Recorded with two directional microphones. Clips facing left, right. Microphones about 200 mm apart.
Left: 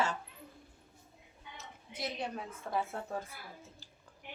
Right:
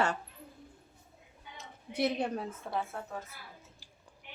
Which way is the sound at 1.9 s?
65° right (ahead or behind).